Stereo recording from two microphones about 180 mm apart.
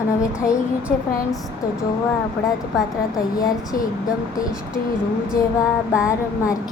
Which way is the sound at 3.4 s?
20° left (ahead or behind).